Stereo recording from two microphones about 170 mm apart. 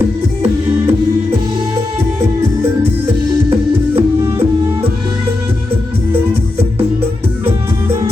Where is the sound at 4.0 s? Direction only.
35° right (ahead or behind).